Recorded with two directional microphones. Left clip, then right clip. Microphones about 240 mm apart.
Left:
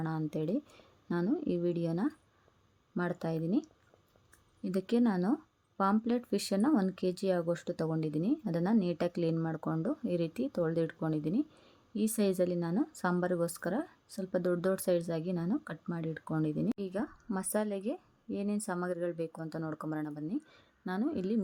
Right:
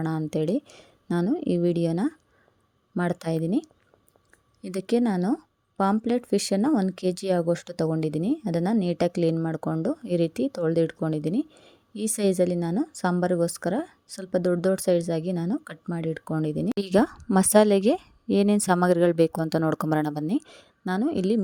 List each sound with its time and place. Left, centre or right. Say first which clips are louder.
0.0 s a woman's voice: right 9 dB; right
16.7 s a woman's voice: right 15 dB; right